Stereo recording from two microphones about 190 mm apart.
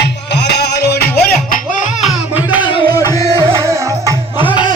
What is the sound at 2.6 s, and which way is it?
Music, 25° left (ahead or behind).